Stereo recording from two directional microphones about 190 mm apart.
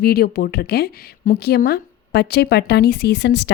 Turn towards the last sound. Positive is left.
turn(degrees=65)  # may be behind; listen again after turning